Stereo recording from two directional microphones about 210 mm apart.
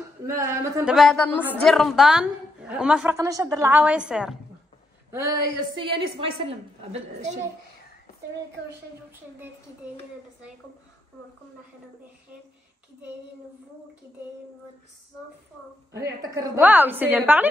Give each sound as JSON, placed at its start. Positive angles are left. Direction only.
{"t": 0.3, "sound": "a woman's voice", "side_deg": -15}
{"t": 0.9, "sound": "a woman's voice", "side_deg": 5}
{"t": 5.1, "sound": "a woman's voice", "side_deg": -15}
{"t": 6.9, "sound": "a woman's voice", "side_deg": -35}
{"t": 16.0, "sound": "a woman's voice", "side_deg": -10}